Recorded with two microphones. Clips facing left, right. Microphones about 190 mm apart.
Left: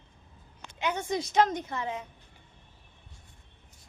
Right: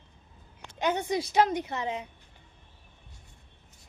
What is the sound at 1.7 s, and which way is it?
Speech, 20° right (ahead or behind).